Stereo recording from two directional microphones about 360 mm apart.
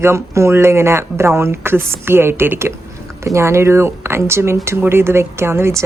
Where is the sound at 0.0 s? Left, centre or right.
Centre.